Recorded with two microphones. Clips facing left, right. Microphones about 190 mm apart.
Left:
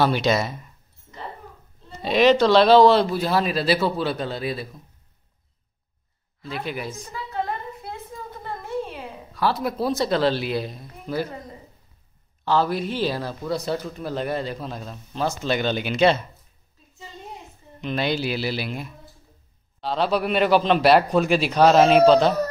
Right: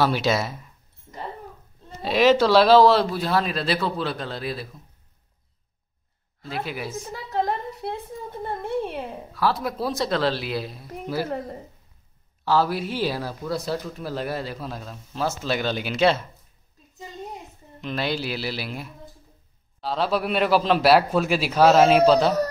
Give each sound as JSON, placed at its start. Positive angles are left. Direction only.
{"t": 0.0, "sound": "speech", "side_deg": -5}
{"t": 2.0, "sound": "speech", "side_deg": -5}
{"t": 6.6, "sound": "speech", "side_deg": -5}
{"t": 7.1, "sound": "a sound", "side_deg": -45}
{"t": 9.3, "sound": "speech", "side_deg": 0}
{"t": 11.2, "sound": "a woman's voice", "side_deg": -60}
{"t": 12.4, "sound": "speech", "side_deg": -5}
{"t": 17.7, "sound": "speech", "side_deg": 0}